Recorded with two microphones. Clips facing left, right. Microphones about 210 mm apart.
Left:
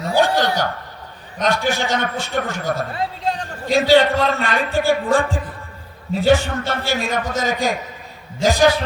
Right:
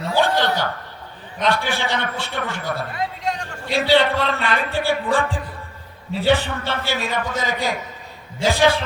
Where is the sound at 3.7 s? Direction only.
45° left (ahead or behind).